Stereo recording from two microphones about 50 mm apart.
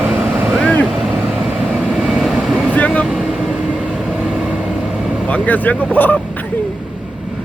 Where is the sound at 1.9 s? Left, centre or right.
Centre.